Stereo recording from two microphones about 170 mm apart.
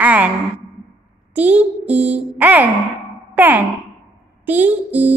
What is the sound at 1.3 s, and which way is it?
A child's voice, 10° right (ahead or behind).